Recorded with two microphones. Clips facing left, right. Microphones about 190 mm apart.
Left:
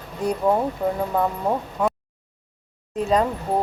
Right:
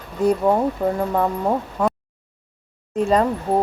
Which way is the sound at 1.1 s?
Centre (ahead or behind).